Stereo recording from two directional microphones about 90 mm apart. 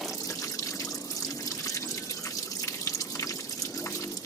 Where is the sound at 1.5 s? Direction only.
40° left (ahead or behind).